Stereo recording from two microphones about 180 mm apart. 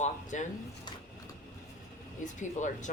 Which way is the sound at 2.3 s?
45° left (ahead or behind).